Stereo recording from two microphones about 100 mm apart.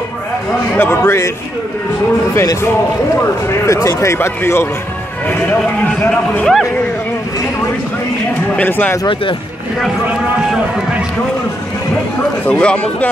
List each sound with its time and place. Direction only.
0.7 s speech: 25° left (ahead or behind)
3.6 s speech: 30° left (ahead or behind)
6.0 s speech: 10° left (ahead or behind)
8.5 s speech: 15° left (ahead or behind)
12.4 s speech: 10° left (ahead or behind)